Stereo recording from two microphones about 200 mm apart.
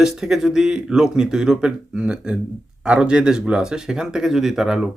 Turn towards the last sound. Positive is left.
turn(degrees=0)  # may be behind; listen again after turning